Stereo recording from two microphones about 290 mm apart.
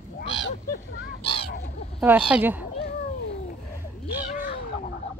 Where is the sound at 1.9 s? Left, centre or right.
Centre.